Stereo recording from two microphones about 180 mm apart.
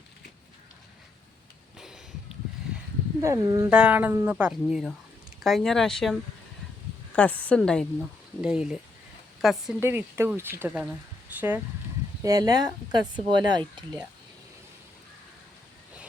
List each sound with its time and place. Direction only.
1.8 s a sound: centre (ahead or behind)
3.2 s speech: 15° right (ahead or behind)
3.7 s speech: 5° right (ahead or behind)
7.2 s speech: 10° left (ahead or behind)
9.8 s speech: 10° right (ahead or behind)